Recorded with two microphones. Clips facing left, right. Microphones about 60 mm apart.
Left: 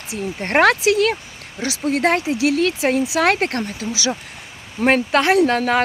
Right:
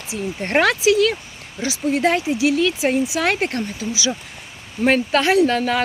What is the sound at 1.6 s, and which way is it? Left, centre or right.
Speech, left.